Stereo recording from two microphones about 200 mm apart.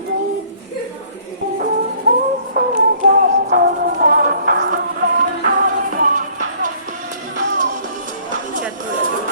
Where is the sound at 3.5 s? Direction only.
50° right (ahead or behind).